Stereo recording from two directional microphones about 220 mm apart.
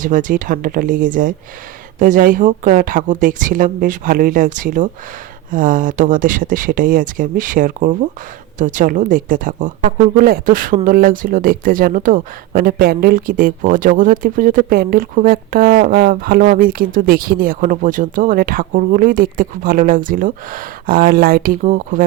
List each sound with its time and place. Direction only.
0.0 s speech: 35° right (ahead or behind)